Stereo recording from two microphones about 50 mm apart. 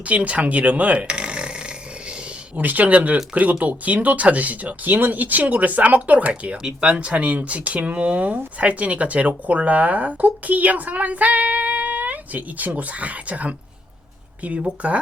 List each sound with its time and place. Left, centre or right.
0.0 s speech: right
2.6 s speech: right